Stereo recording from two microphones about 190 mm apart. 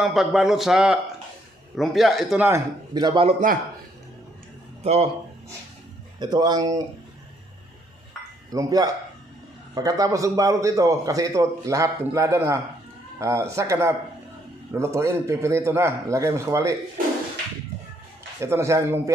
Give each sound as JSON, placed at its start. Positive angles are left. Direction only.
{"t": 0.0, "sound": "speech", "side_deg": 0}
{"t": 2.4, "sound": "a man's voice", "side_deg": -20}
{"t": 6.1, "sound": "a man's voice", "side_deg": -20}
{"t": 8.5, "sound": "a man's voice", "side_deg": -20}
{"t": 18.4, "sound": "a man's voice", "side_deg": -15}